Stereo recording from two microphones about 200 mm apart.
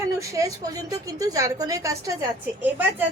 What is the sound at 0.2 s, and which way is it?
A woman's voice, 15° right (ahead or behind).